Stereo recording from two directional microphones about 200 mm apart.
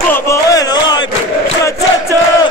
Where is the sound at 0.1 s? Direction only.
15° left (ahead or behind).